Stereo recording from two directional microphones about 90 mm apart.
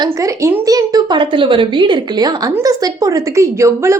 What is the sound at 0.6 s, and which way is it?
Speech, 40° right (ahead or behind).